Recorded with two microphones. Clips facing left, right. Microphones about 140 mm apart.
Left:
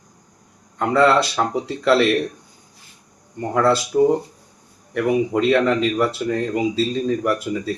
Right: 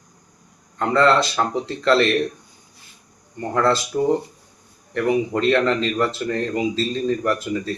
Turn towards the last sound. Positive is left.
turn(degrees=10)  # may be behind; listen again after turning